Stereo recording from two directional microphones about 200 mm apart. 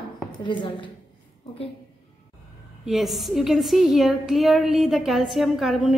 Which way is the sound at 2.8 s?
Centre (ahead or behind).